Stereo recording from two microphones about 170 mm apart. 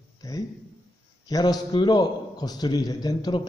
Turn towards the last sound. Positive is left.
turn(degrees=25)  # may be behind; listen again after turning